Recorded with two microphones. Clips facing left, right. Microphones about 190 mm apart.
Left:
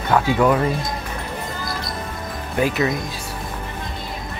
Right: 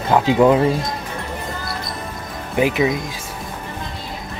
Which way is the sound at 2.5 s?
15° right (ahead or behind).